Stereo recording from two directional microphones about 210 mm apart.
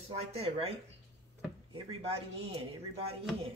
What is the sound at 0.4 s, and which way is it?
Speech, 30° right (ahead or behind).